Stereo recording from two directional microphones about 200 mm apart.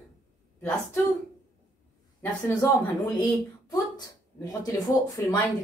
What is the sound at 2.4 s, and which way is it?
Speech, 20° left (ahead or behind).